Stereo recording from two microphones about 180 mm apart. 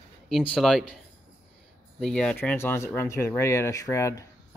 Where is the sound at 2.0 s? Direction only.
5° left (ahead or behind).